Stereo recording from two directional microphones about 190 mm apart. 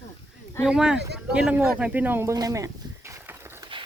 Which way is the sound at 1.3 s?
5° right (ahead or behind).